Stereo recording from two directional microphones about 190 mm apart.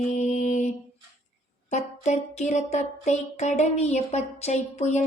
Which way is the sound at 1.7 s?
35° left (ahead or behind).